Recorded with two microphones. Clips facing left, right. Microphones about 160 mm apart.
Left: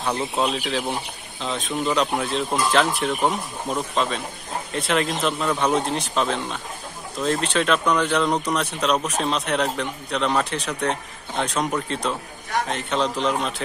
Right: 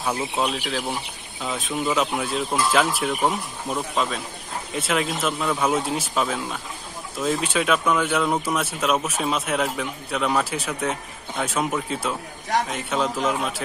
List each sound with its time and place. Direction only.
0.0 s speech: 5° right (ahead or behind)